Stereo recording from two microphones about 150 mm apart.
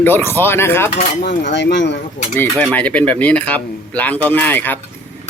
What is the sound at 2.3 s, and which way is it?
Speech, 10° left (ahead or behind).